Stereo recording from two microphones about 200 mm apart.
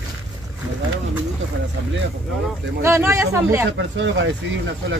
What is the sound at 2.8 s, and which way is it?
Speech, 15° right (ahead or behind).